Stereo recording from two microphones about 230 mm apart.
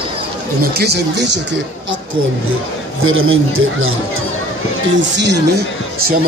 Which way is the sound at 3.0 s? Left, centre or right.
Right.